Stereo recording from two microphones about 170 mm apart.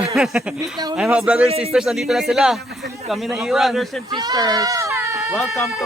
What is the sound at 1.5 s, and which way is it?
Speech, 35° right (ahead or behind).